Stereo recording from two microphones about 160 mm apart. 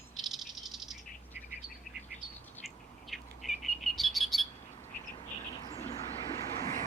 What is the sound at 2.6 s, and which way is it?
Bird, centre (ahead or behind).